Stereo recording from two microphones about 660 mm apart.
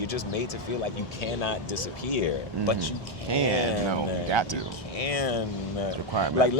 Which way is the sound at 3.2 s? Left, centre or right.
Right.